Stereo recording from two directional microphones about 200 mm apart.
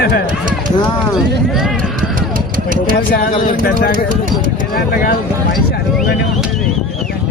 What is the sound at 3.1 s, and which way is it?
Speech, 40° left (ahead or behind).